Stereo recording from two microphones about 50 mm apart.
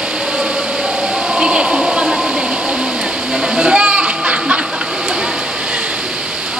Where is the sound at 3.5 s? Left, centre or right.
Right.